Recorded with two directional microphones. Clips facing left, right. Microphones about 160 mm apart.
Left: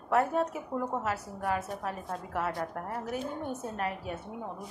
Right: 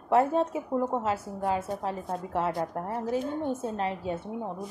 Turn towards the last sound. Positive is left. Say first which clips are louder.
# right 4 dB
turn(degrees=-25)  # may be behind; listen again after turning